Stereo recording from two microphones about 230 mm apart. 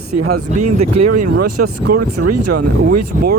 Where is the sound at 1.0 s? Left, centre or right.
Right.